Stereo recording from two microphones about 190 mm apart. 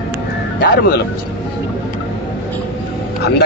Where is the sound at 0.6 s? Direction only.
55° left (ahead or behind).